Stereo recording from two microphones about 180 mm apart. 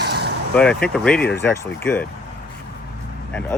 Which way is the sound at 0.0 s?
65° right (ahead or behind).